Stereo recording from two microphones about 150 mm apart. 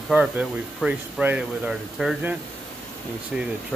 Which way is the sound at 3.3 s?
5° right (ahead or behind).